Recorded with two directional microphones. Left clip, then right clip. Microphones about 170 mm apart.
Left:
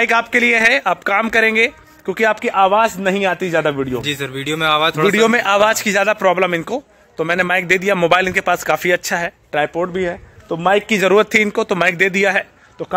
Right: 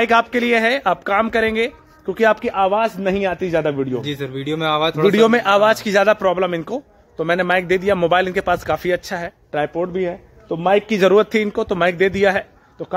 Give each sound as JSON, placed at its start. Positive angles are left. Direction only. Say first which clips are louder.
{"t": 0.0, "sound": "a man's voice", "louder": "left 2 dB", "side_deg": 10}
{"t": 4.0, "sound": "speech", "louder": "left 4 dB", "side_deg": -15}
{"t": 5.0, "sound": "a man's voice", "louder": "right 3 dB", "side_deg": 10}